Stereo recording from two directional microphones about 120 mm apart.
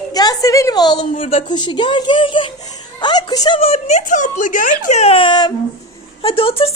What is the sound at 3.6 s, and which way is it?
Speech, 65° left (ahead or behind).